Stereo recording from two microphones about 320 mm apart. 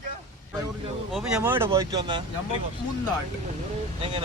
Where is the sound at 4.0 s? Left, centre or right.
Centre.